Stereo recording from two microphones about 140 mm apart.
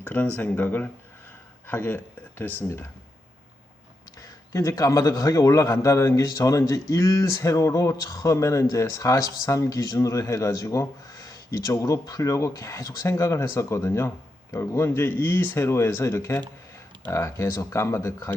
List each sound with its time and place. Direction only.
0.0 s speech: 15° left (ahead or behind)
4.5 s speech: 20° left (ahead or behind)